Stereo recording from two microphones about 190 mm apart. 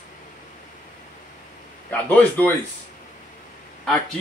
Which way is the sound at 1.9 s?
10° left (ahead or behind).